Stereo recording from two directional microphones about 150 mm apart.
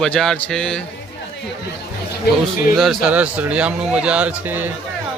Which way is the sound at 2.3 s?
90° left.